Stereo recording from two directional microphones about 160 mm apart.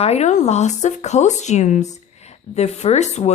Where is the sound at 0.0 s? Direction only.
45° left (ahead or behind).